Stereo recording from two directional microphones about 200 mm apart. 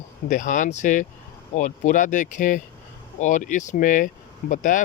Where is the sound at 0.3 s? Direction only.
40° left (ahead or behind).